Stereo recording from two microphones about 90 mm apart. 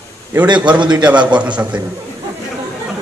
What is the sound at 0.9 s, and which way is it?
Speech, 10° right (ahead or behind).